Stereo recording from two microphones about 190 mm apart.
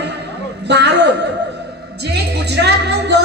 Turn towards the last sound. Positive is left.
turn(degrees=-60)  # may be behind; listen again after turning